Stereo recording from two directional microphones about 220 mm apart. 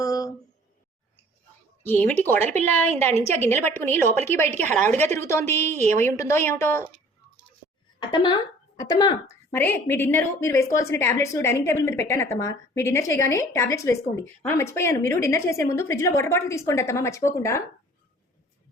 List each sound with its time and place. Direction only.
0.0 s a sound: 15° left (ahead or behind)
1.8 s a woman's voice: 10° left (ahead or behind)
7.9 s speech: 20° left (ahead or behind)
9.5 s a woman's voice: 10° left (ahead or behind)